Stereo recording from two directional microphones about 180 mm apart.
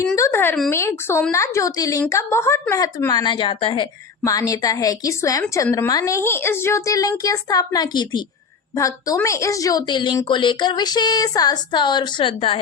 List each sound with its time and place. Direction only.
0.2 s a woman's voice: 10° left (ahead or behind); by 12.5 s 30° left (ahead or behind)